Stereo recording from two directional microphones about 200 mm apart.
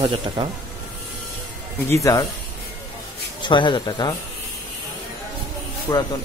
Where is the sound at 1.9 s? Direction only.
15° left (ahead or behind).